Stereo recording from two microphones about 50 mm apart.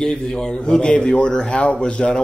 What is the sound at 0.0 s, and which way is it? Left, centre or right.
Speech, centre.